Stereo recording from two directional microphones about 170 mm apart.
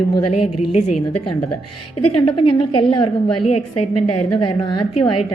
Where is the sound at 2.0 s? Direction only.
35° left (ahead or behind).